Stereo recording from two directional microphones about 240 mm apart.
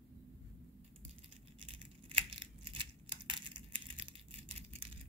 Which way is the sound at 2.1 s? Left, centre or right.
Right.